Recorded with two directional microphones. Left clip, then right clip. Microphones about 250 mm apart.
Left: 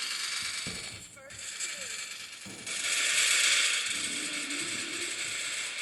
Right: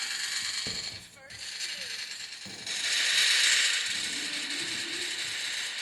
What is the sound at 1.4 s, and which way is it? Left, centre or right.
Mechanisms, centre.